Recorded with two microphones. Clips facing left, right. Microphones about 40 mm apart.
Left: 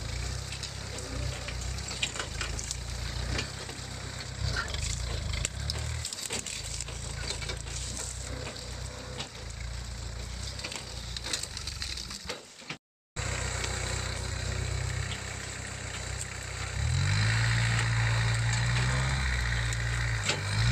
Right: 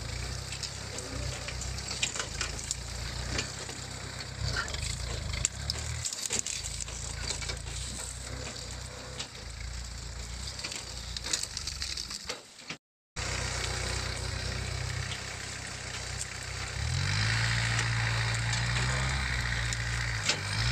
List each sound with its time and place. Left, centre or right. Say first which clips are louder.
1.9 s wood: even; centre
4.5 s vehicle: even; centre
7.2 s wood: left 1 dB; centre
13.2 s vehicle: even; left
16.5 s vehicle: left 1 dB; centre
16.9 s vehicle: left 1 dB; left
19.8 s wood: left 1 dB; centre